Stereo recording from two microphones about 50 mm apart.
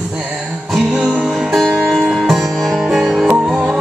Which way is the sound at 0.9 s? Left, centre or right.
Centre.